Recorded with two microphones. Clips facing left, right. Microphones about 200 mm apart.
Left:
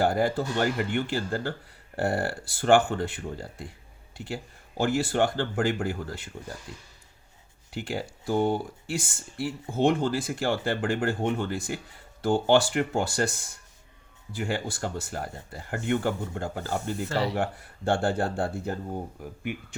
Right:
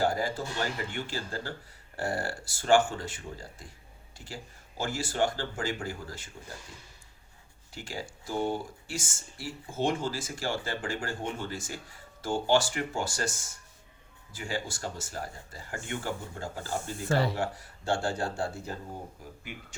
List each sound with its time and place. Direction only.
0.0 s speech: 60° left (ahead or behind)
17.1 s speech: 50° right (ahead or behind)
17.3 s speech: 55° left (ahead or behind)